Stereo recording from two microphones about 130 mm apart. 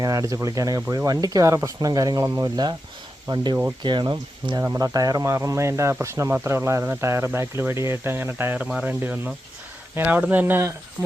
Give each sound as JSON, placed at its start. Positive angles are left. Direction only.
{"t": 0.0, "sound": "speech", "side_deg": -25}